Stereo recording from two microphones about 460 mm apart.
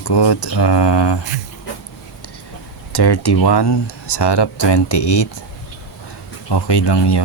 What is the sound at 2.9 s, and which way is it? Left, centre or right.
Speech, left.